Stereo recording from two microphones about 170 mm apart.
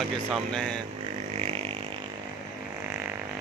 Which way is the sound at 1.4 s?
35° right (ahead or behind).